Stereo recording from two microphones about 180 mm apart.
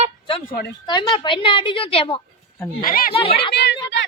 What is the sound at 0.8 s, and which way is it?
A woman's voice, 25° left (ahead or behind).